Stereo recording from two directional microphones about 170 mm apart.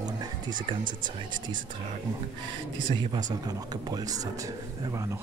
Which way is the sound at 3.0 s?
25° right (ahead or behind).